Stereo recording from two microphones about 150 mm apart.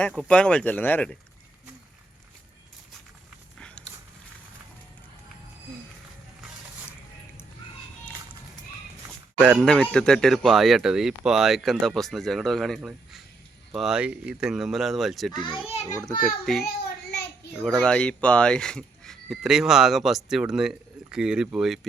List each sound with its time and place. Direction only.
0.3 s speech: 5° left (ahead or behind)
9.0 s speech: 5° right (ahead or behind)
15.4 s a child's voice: 35° left (ahead or behind)
16.2 s speech: centre (ahead or behind)
16.6 s a sound: 90° left
17.6 s speech: 5° left (ahead or behind)